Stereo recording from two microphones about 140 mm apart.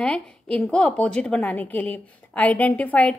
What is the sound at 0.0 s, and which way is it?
A woman's voice, 5° left (ahead or behind).